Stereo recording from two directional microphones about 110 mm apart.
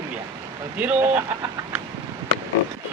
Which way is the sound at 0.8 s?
15° right (ahead or behind).